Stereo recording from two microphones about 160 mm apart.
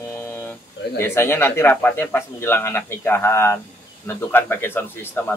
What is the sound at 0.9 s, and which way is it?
Speech, 15° left (ahead or behind).